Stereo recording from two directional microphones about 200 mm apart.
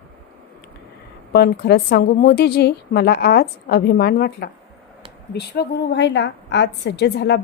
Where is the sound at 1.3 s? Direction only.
55° left (ahead or behind).